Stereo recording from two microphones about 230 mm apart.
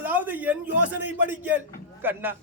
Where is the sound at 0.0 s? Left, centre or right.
Centre.